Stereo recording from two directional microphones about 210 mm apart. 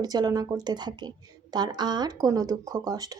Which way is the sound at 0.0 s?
20° right (ahead or behind).